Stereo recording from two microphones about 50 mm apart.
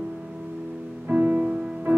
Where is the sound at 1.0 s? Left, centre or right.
Right.